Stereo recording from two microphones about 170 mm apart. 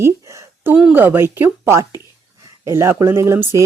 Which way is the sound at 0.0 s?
15° right (ahead or behind).